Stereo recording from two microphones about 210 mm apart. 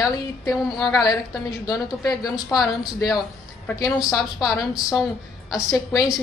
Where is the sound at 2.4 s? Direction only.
15° left (ahead or behind).